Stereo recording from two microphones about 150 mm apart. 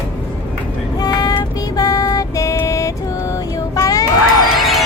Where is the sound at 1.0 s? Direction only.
25° left (ahead or behind).